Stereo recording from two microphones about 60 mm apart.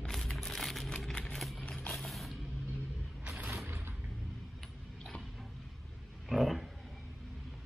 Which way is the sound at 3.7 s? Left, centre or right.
Right.